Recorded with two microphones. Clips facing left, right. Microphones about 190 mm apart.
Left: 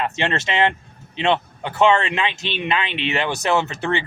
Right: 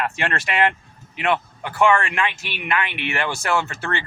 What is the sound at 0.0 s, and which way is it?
A man's voice, 25° left (ahead or behind).